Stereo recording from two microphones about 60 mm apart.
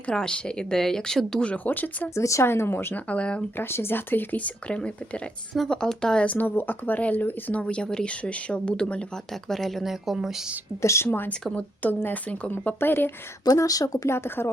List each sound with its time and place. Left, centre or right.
0.0 s speech: centre
1.5 s speech: left
2.1 s speech: left
2.5 s speech: left
3.1 s speech: centre
3.6 s speech: left; by 6.3 s centre
6.3 s speech: left; by 9.0 s centre
9.3 s speech: centre
10.8 s speech: left
11.5 s speech: left
12.8 s speech: left
13.4 s speech: left
14.1 s speech: left